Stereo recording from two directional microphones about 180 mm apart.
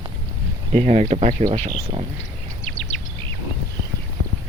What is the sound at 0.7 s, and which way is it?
Speech, 40° right (ahead or behind).